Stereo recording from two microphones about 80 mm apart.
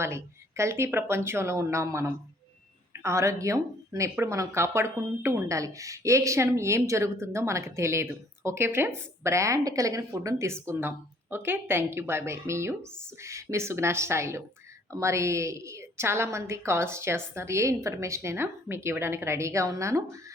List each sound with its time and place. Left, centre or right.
0.0 s a woman's voice: right